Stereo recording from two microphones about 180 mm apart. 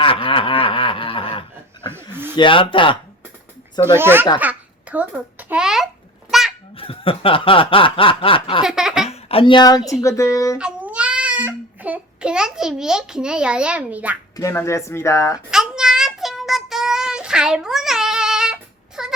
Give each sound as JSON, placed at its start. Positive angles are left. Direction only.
{"t": 0.0, "sound": "snicker", "side_deg": 30}
{"t": 3.8, "sound": "speech", "side_deg": -15}
{"t": 4.4, "sound": "a sound", "side_deg": -10}
{"t": 6.7, "sound": "snicker", "side_deg": 30}
{"t": 8.6, "sound": "laughter", "side_deg": -5}
{"t": 9.0, "sound": "speech", "side_deg": 35}
{"t": 10.6, "sound": "a child's voice", "side_deg": -5}
{"t": 14.3, "sound": "speech", "side_deg": 15}
{"t": 15.4, "sound": "child singing", "side_deg": -5}